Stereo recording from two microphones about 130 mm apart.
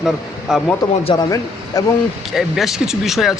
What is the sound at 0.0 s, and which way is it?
Speech, 5° right (ahead or behind).